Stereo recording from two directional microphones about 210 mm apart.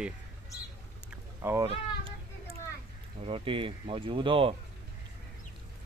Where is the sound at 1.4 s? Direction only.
10° right (ahead or behind).